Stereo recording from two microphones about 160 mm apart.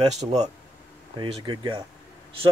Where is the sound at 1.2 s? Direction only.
30° right (ahead or behind).